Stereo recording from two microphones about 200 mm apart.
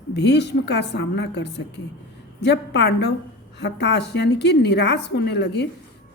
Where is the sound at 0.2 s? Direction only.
60° left (ahead or behind).